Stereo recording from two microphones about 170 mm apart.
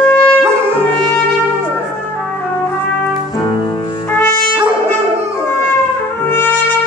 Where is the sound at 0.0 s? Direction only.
5° left (ahead or behind).